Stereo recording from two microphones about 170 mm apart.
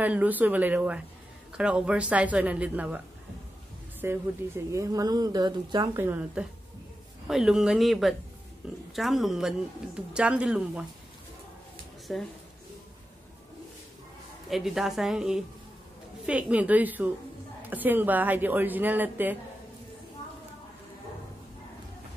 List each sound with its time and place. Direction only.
0.0 s speech: 10° right (ahead or behind)
4.0 s a woman's voice: 15° right (ahead or behind)
5.9 s speech: 10° right (ahead or behind)
12.1 s speech: centre (ahead or behind)
14.5 s speech: centre (ahead or behind)